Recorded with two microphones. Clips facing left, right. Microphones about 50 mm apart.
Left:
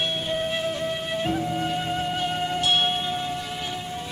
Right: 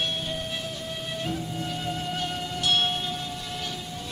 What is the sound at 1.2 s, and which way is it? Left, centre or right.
Music, left.